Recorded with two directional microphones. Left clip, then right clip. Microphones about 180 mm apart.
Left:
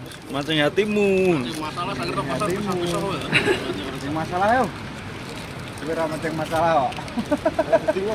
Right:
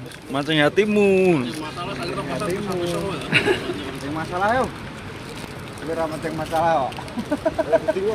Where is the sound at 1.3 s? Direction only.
15° right (ahead or behind).